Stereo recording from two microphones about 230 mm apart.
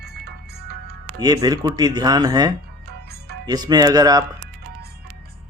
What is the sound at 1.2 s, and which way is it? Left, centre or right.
Speech, centre.